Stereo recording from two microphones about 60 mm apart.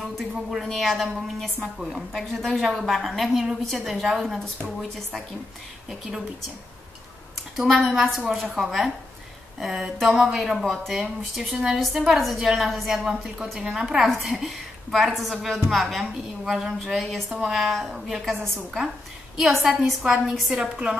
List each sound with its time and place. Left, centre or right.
0.0 s a woman's voice: centre
5.9 s speech: centre
7.5 s a woman's voice: centre
19.8 s speech: centre